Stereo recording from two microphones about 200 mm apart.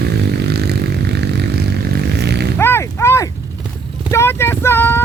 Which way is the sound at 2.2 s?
55° right (ahead or behind).